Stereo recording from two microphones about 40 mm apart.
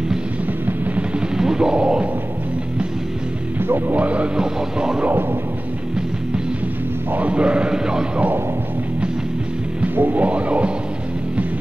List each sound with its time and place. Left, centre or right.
1.4 s music: centre
3.6 s music: right
3.9 s music: right
4.4 s speech: centre
7.2 s speech: right
7.7 s music: centre
9.9 s music: right
10.2 s music: right